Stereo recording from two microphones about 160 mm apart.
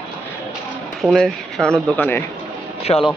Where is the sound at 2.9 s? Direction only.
30° left (ahead or behind).